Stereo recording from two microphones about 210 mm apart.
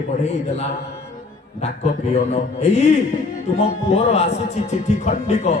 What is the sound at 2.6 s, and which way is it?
Speech, 30° left (ahead or behind).